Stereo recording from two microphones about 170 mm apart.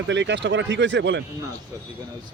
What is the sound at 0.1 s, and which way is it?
A man's voice, 90° right.